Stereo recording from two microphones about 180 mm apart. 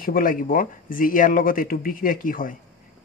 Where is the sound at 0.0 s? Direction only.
50° left (ahead or behind).